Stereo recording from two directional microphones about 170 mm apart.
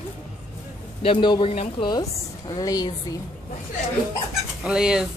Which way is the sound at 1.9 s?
25° left (ahead or behind).